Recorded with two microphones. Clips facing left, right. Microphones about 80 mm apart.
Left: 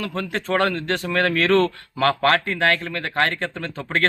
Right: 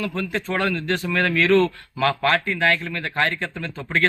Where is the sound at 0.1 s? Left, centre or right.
Left.